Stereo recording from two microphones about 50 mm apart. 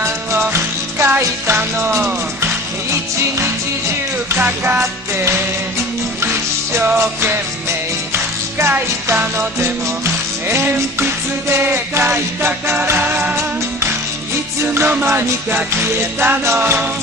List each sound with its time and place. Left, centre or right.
0.5 s music: right
2.4 s music: right
4.4 s music: right
8.1 s music: right
12.0 s music: right
14.6 s music: right